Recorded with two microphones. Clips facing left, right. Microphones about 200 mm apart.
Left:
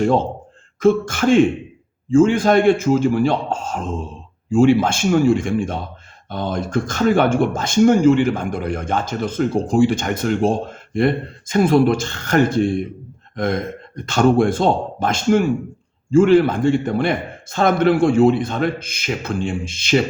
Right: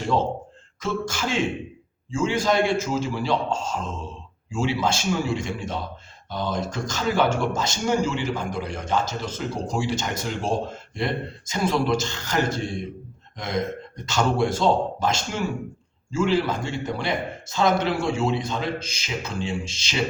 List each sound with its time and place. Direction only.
0.0 s speech: 55° left (ahead or behind)